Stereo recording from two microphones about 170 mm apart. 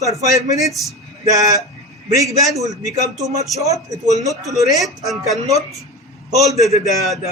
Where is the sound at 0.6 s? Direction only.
Centre (ahead or behind).